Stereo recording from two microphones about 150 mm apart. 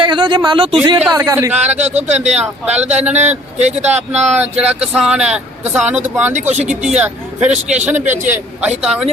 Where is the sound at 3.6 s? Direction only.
45° right (ahead or behind).